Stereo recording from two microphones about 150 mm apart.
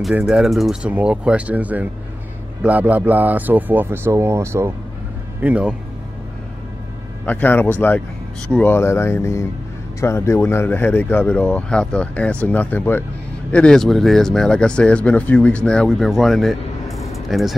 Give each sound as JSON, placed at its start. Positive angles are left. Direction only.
{"t": 0.1, "sound": "speech", "side_deg": -5}
{"t": 7.2, "sound": "speech", "side_deg": 15}
{"t": 17.1, "sound": "a sound", "side_deg": 0}